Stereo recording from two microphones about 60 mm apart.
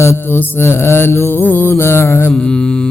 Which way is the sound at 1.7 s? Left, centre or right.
Left.